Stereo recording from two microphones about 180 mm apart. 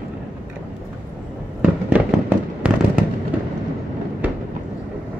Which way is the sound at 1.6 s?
10° right (ahead or behind).